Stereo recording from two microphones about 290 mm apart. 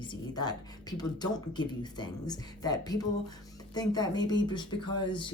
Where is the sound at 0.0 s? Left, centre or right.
Centre.